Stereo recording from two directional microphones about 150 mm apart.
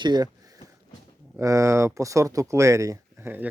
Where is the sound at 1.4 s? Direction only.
20° right (ahead or behind).